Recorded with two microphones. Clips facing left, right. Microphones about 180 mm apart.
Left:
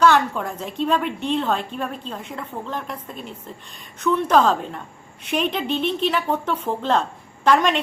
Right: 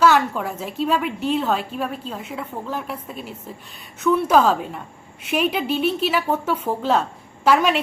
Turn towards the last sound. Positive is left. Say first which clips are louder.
# even
turn(degrees=-5)  # may be behind; listen again after turning